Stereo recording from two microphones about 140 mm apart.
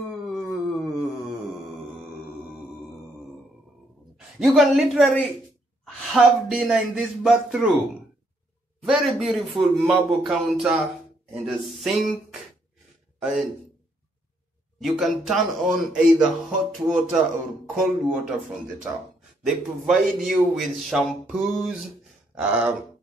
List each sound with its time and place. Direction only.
0.3 s a sound: centre (ahead or behind)
4.4 s a man's voice: centre (ahead or behind)
13.2 s a man's voice: 5° right (ahead or behind)
14.8 s a man's voice: centre (ahead or behind)
19.4 s a man's voice: 5° right (ahead or behind)
22.4 s a sound: 10° right (ahead or behind)